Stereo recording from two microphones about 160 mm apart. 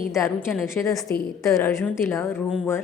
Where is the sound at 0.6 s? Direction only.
15° left (ahead or behind).